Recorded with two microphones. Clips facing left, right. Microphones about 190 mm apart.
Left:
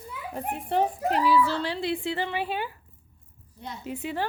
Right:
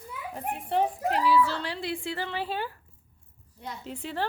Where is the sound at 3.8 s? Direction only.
10° left (ahead or behind).